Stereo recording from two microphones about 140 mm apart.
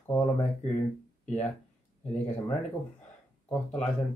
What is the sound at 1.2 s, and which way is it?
Speech, 50° left (ahead or behind).